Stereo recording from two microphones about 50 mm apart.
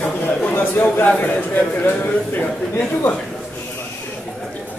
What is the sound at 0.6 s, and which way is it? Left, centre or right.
Speech, left.